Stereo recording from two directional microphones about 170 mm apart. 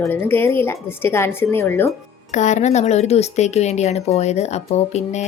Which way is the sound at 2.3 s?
45° left (ahead or behind).